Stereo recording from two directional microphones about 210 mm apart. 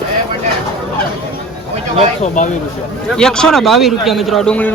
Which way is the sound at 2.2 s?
35° left (ahead or behind).